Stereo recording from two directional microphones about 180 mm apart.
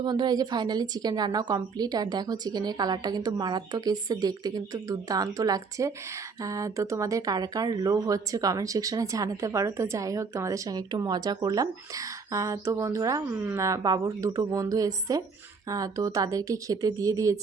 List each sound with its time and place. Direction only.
0.0 s speech: 25° right (ahead or behind)